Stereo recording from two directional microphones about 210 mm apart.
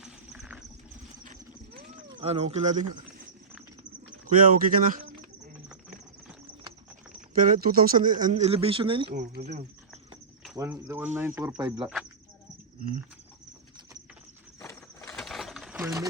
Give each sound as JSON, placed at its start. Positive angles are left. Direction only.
{"t": 0.0, "sound": "a sound", "side_deg": -5}
{"t": 1.2, "sound": "vehicle", "side_deg": -40}
{"t": 2.2, "sound": "speech", "side_deg": -30}
{"t": 4.4, "sound": "speech", "side_deg": -40}
{"t": 7.3, "sound": "speech", "side_deg": -40}
{"t": 9.1, "sound": "insect", "side_deg": -50}
{"t": 9.4, "sound": "speech", "side_deg": -35}
{"t": 10.6, "sound": "speech", "side_deg": -10}
{"t": 11.8, "sound": "speech", "side_deg": 0}
{"t": 15.1, "sound": "sewing machine", "side_deg": 0}